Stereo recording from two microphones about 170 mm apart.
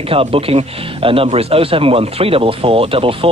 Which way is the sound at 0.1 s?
35° right (ahead or behind).